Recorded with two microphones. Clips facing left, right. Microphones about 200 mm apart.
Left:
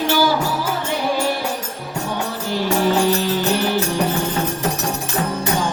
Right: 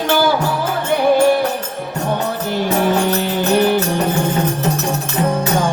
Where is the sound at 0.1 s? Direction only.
55° right (ahead or behind).